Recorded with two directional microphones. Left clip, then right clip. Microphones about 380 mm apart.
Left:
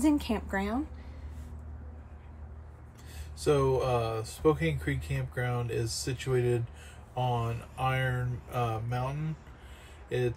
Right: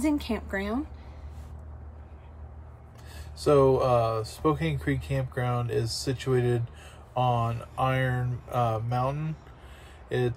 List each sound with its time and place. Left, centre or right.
0.0 s a woman's voice: centre
3.3 s speech: centre